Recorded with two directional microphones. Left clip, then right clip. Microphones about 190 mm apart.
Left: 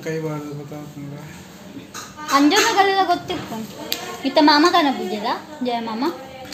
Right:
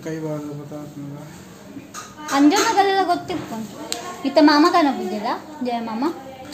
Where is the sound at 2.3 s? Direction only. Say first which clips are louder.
Left 1 dB; centre (ahead or behind).